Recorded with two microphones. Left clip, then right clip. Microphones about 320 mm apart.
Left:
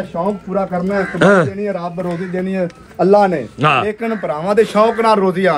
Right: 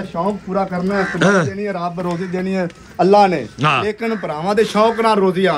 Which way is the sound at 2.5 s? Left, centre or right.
Centre.